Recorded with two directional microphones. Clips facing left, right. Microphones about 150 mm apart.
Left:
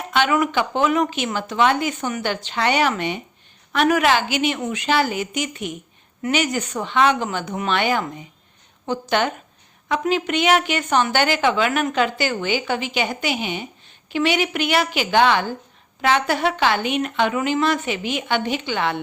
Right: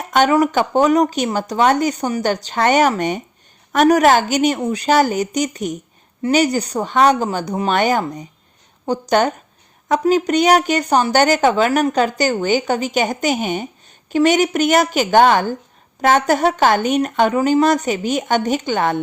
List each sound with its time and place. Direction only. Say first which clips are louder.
0.1 s speech: right 5 dB; 40° right (ahead or behind)